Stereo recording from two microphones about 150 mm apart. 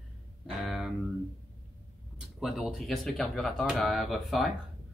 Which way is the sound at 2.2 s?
Centre (ahead or behind).